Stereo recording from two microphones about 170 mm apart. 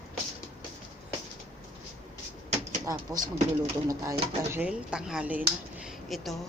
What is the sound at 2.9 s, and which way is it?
Speech, 20° right (ahead or behind).